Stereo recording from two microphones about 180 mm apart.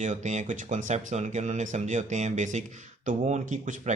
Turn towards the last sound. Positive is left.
turn(degrees=-40)  # may be behind; listen again after turning